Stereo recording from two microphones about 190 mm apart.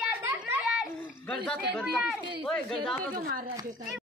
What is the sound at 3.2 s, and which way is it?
Speech, 55° right (ahead or behind).